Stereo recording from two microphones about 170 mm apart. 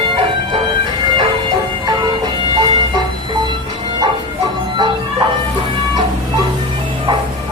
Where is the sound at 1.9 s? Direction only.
25° right (ahead or behind).